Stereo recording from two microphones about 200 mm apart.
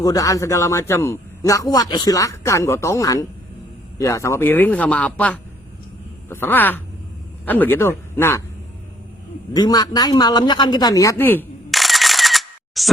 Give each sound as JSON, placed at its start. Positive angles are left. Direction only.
{"t": 0.0, "sound": "a man's voice", "side_deg": 15}
{"t": 9.5, "sound": "a man's voice", "side_deg": 20}